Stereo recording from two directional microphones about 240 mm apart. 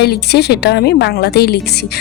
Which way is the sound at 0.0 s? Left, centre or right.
Left.